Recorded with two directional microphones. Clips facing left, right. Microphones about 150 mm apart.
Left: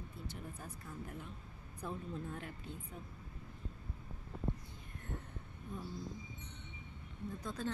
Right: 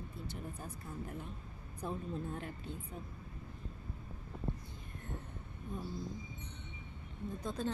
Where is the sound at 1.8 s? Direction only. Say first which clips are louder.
Right 3 dB; 35° right (ahead or behind).